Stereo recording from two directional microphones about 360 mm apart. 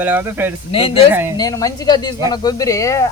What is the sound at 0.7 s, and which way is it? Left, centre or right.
Speech, centre.